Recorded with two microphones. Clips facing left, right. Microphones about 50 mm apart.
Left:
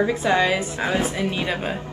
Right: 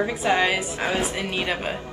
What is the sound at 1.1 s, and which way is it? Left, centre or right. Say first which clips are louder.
Speech: left 2 dB; centre.